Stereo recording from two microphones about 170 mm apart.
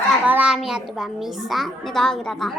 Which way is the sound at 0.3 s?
5° right (ahead or behind).